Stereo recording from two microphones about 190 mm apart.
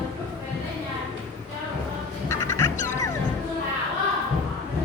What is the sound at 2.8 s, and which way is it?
Music, 15° left (ahead or behind).